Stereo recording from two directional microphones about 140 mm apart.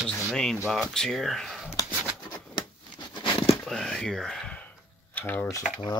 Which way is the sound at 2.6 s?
30° left (ahead or behind).